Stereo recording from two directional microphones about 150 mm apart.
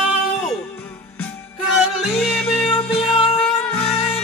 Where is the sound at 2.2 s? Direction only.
5° left (ahead or behind).